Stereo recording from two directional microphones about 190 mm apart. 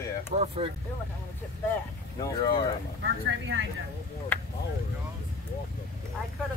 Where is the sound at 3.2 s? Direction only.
80° right.